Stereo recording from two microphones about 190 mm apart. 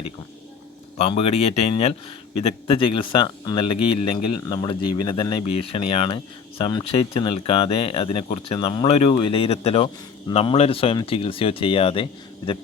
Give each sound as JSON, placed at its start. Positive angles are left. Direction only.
{"t": 0.9, "sound": "speech", "side_deg": 35}